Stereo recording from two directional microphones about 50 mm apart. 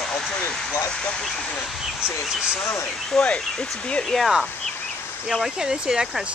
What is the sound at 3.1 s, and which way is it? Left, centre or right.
Speech, centre.